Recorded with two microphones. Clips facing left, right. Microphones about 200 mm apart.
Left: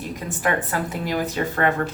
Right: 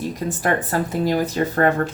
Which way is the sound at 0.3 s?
40° right (ahead or behind).